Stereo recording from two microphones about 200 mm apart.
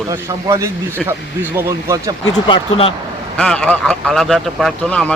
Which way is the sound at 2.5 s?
25° left (ahead or behind).